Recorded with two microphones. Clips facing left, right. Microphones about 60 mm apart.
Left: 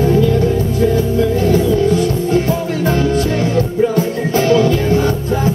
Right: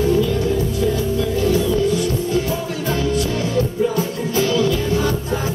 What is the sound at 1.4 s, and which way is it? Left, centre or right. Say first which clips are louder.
Music: left 2 dB; left.